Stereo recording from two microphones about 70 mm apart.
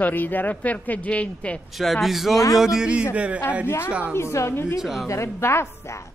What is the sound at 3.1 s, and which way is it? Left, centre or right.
A woman's voice, right.